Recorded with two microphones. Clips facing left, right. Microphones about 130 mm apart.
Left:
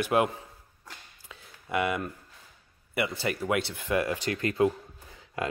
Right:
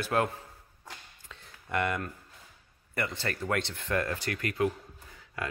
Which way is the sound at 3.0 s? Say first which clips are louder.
Left 4 dB; 10° left (ahead or behind).